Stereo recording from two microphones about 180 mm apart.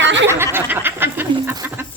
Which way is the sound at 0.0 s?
85° right.